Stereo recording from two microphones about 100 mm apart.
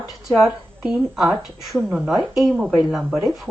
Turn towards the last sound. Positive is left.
turn(degrees=0)  # may be behind; listen again after turning